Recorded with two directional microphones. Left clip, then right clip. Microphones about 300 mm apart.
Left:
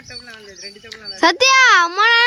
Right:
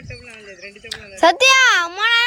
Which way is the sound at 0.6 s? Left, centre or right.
Centre.